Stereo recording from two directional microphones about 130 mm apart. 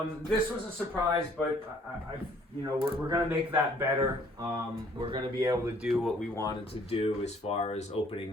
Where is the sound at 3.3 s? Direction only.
15° right (ahead or behind).